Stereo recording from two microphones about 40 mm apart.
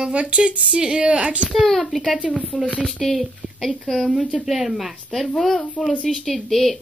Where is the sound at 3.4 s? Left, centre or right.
Left.